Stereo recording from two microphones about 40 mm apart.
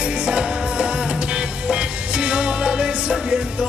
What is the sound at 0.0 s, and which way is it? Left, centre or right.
Music, right.